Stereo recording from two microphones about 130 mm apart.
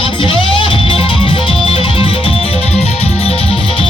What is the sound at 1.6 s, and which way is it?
Music, 45° left (ahead or behind).